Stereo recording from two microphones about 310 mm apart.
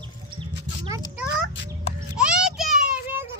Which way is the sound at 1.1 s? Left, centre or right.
Centre.